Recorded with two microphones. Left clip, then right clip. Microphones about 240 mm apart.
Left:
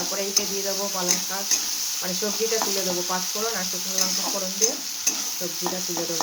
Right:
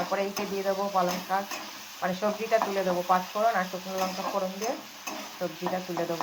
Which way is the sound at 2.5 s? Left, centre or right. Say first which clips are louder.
Left 1 dB; left.